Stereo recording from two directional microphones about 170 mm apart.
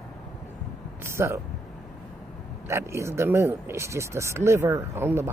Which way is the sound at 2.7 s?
15° right (ahead or behind).